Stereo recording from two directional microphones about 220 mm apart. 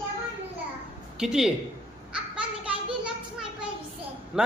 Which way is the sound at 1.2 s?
Centre (ahead or behind).